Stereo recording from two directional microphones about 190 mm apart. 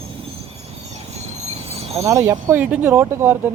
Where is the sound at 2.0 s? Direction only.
15° right (ahead or behind).